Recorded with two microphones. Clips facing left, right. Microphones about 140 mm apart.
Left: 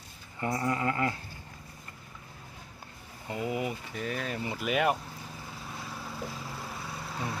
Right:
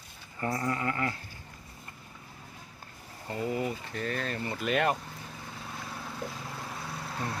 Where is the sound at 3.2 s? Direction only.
10° left (ahead or behind).